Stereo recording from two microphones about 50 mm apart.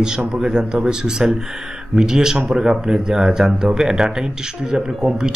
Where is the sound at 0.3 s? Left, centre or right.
Centre.